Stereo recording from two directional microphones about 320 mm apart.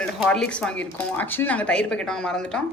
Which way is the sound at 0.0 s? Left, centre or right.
Centre.